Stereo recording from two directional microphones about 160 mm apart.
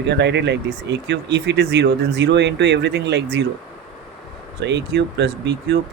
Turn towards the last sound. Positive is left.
turn(degrees=-90)